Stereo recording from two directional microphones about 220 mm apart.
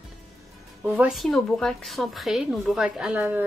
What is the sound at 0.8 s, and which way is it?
Speech, 5° right (ahead or behind).